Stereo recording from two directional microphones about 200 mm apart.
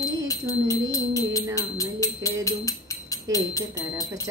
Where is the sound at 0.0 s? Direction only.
15° left (ahead or behind).